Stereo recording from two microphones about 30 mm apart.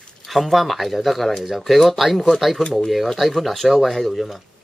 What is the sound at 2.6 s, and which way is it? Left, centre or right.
Speech, left.